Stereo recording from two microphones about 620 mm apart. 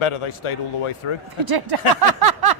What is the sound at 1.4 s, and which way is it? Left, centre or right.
Speech, right.